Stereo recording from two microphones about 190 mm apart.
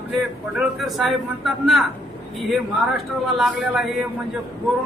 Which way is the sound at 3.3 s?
Centre (ahead or behind).